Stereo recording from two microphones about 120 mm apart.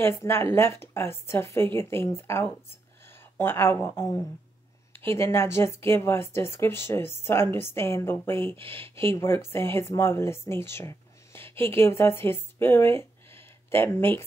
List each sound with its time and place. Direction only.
0.0 s speech: 20° left (ahead or behind)